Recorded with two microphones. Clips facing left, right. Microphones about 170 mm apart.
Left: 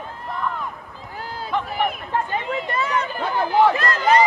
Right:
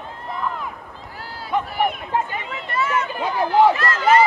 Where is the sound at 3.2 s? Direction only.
15° right (ahead or behind).